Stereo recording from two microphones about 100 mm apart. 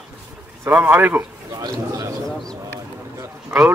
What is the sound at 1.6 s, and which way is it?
Speech, 35° right (ahead or behind).